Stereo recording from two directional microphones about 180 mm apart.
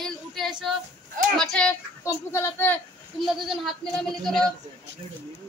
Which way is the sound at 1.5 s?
5° left (ahead or behind).